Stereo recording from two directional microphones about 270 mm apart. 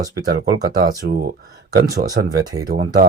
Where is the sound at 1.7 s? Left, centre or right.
Right.